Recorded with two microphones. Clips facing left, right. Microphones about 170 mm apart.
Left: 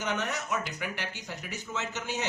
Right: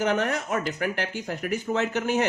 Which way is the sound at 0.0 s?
55° right (ahead or behind).